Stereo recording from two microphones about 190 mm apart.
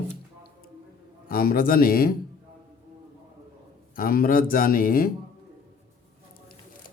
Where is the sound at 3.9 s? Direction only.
50° left (ahead or behind).